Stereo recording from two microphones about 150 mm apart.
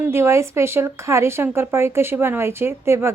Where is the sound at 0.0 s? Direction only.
15° right (ahead or behind).